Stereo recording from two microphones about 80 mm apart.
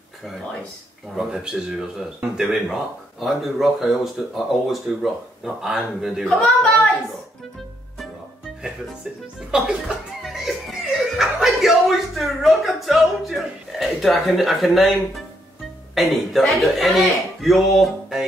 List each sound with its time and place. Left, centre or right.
1.1 s speech: centre
6.2 s a woman's voice: centre
9.5 s speech: centre
10.2 s music: centre
11.1 s a man's voice: centre